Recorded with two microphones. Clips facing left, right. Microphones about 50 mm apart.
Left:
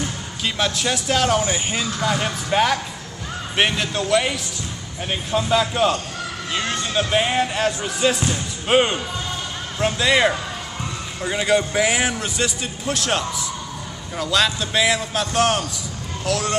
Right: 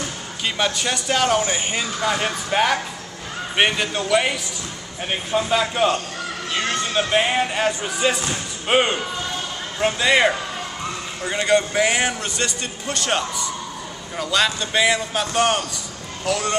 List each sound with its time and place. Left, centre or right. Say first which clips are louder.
0.7 s music: even; centre
8.6 s speech: left 1 dB; centre
9.8 s music: even; centre
11.2 s a man's voice: even; centre